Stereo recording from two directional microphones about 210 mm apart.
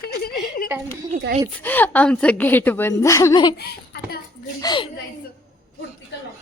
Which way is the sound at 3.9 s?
50° left (ahead or behind).